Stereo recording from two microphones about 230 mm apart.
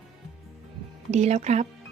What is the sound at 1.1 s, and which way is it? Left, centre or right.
Speech, right.